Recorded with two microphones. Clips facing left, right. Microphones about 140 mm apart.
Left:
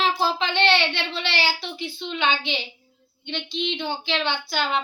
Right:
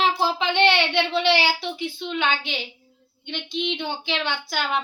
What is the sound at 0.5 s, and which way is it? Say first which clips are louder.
Speech: right 2 dB; 15° right (ahead or behind).